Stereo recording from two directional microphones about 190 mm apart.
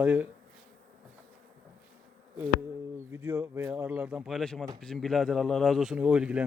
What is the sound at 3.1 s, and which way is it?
Speech, 10° right (ahead or behind).